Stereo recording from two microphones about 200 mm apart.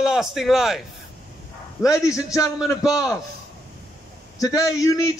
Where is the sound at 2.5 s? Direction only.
Centre (ahead or behind).